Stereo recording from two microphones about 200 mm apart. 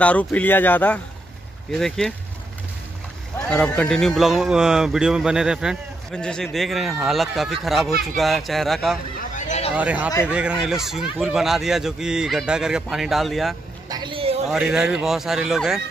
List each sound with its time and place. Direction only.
0.0 s a man's voice: 5° left (ahead or behind)
3.4 s a man's voice: 5° left (ahead or behind)
9.3 s a sound: 35° left (ahead or behind)
9.8 s a man's voice: 5° right (ahead or behind)
13.8 s a sound: 20° right (ahead or behind)
14.5 s a man's voice: 5° right (ahead or behind)